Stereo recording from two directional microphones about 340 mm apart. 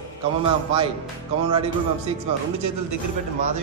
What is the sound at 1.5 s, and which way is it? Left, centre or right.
Speech, centre.